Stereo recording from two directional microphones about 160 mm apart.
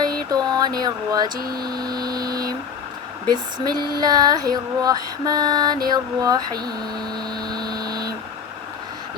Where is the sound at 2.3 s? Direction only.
25° right (ahead or behind).